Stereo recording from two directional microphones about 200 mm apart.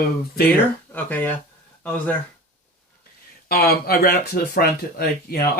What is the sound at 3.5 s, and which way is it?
Speech, 50° left (ahead or behind).